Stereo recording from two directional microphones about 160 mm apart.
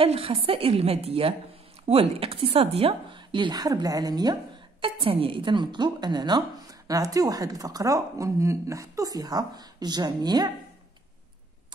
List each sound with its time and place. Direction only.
0.0 s a woman's voice: 35° right (ahead or behind)